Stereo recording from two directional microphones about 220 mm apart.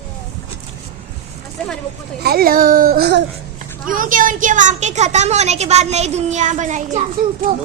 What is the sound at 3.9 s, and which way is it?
A woman's voice, 40° right (ahead or behind).